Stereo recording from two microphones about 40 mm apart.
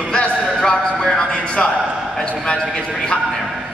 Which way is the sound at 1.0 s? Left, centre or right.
Centre.